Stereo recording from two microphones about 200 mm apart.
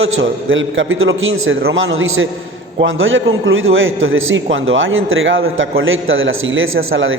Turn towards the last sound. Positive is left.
turn(degrees=-80)